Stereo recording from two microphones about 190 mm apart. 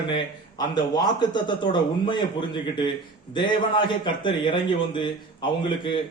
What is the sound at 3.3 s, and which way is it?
A man's voice, 25° left (ahead or behind).